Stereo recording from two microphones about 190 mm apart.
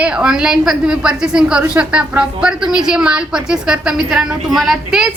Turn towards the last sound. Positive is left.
turn(degrees=0)  # may be behind; listen again after turning